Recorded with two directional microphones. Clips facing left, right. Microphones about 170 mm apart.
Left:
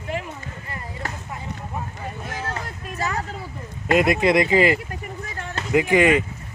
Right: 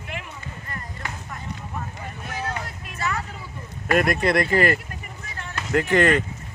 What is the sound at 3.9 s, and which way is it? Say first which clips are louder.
Speech: left 3 dB; 20° left (ahead or behind).